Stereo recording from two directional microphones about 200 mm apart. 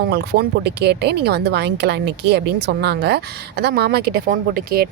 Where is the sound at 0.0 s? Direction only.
55° right (ahead or behind).